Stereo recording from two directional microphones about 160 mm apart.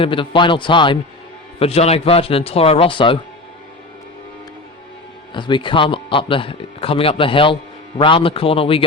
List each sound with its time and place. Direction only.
0.0 s speech: 30° left (ahead or behind)
5.3 s speech: 30° left (ahead or behind)